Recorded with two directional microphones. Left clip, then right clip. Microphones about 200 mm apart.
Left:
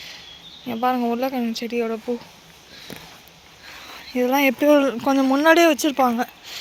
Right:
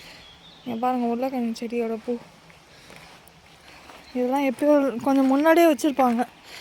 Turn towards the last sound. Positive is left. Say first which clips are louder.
# left 1 dB
turn(degrees=-20)  # may be behind; listen again after turning